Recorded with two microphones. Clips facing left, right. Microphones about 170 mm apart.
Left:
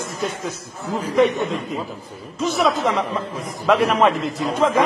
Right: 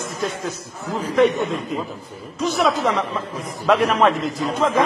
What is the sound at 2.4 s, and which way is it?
A man's voice, centre (ahead or behind).